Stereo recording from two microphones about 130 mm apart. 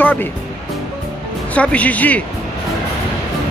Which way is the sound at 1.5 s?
10° left (ahead or behind).